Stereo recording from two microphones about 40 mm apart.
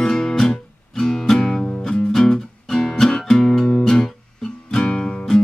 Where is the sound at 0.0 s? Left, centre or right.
Centre.